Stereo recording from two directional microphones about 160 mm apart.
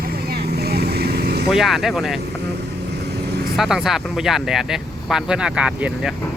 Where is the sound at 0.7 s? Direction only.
85° right.